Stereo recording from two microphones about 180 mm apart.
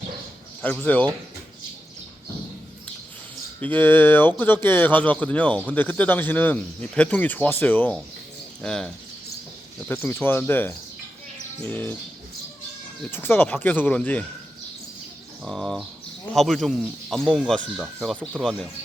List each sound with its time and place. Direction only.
0.6 s speech: 10° left (ahead or behind)
3.6 s speech: 10° left (ahead or behind)
9.9 s speech: 10° left (ahead or behind)
13.1 s speech: 10° left (ahead or behind)
15.4 s speech: centre (ahead or behind)